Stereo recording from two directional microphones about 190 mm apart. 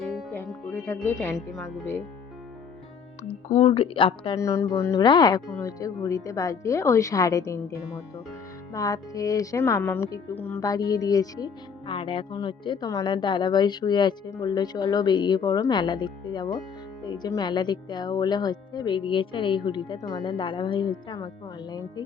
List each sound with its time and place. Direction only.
0.2 s music: 10° left (ahead or behind)
3.5 s a woman's voice: 35° left (ahead or behind)
4.4 s a woman's voice: 15° left (ahead or behind)